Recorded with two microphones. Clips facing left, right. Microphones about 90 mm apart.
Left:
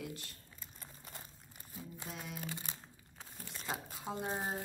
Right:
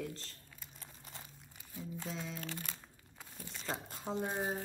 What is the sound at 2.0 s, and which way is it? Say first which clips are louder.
Speech: right 3 dB; 10° left (ahead or behind).